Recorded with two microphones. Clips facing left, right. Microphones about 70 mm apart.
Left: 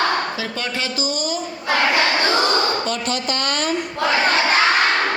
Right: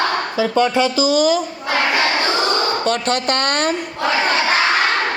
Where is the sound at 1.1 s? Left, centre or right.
Right.